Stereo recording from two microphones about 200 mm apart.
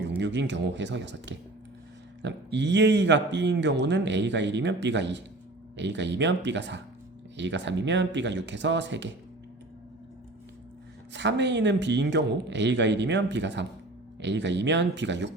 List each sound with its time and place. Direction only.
0.2 s speech: 60° right (ahead or behind)
11.1 s speech: 60° right (ahead or behind)